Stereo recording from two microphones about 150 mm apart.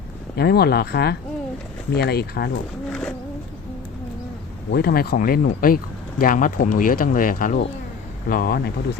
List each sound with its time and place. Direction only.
0.3 s speech: 90° left
4.7 s speech: 90° left; by 7.6 s 65° left (ahead or behind)
8.3 s speech: 90° left